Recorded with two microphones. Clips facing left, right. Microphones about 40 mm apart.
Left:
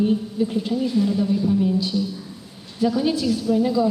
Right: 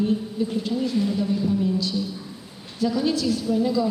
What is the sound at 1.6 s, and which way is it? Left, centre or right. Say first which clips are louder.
A woman's voice: left 3 dB; centre.